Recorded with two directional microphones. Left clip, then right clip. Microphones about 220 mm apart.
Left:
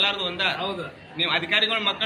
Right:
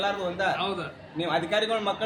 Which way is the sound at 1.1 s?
35° right (ahead or behind).